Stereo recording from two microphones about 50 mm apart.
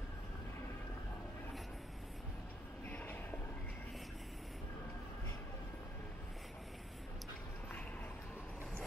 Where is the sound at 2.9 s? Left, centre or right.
Left.